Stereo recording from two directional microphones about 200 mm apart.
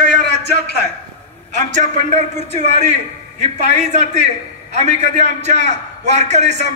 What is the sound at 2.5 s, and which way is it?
A man's voice, 35° right (ahead or behind).